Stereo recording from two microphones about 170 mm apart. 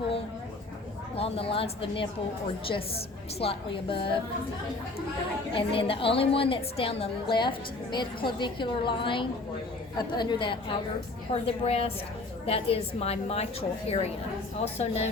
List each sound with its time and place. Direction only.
1.1 s a woman's voice: 35° left (ahead or behind)
3.4 s a woman's voice: 30° left (ahead or behind)
5.5 s a woman's voice: 30° left (ahead or behind)